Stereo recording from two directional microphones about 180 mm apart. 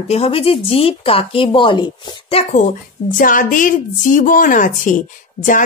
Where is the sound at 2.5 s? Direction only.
50° left (ahead or behind).